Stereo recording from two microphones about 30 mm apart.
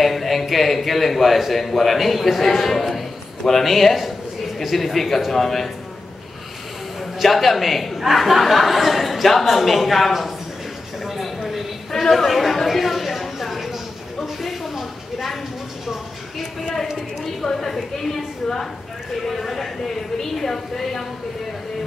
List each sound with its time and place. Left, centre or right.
0.0 s a woman's voice: centre
7.2 s speech: centre
11.1 s a sound: centre
11.9 s chatter: centre
14.4 s a sound: centre
17.4 s a woman's voice: right
19.2 s a woman's voice: centre